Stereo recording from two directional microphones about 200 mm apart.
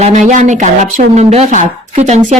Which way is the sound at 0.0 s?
35° right (ahead or behind).